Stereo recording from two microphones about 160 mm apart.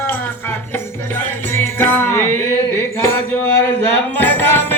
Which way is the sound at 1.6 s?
15° left (ahead or behind).